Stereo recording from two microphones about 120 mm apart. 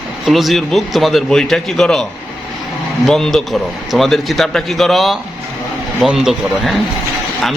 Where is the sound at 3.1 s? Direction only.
5° left (ahead or behind).